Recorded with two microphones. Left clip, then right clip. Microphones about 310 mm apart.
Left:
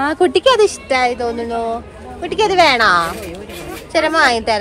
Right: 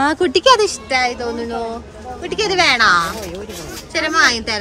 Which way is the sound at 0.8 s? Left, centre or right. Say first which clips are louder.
Left 2 dB; centre.